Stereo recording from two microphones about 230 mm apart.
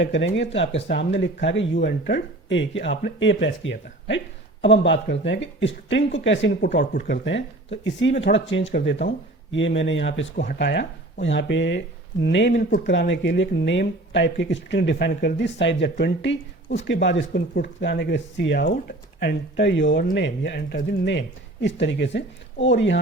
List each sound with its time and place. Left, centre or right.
0.0 s speech: left
16.6 s speech: left
16.9 s speech: left